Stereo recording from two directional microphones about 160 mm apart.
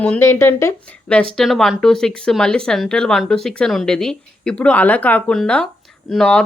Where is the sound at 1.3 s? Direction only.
Centre (ahead or behind).